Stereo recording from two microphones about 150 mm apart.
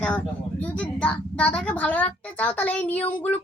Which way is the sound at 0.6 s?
10° left (ahead or behind).